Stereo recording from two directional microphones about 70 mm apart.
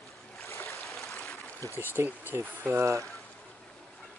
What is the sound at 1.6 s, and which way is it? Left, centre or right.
Speech, left.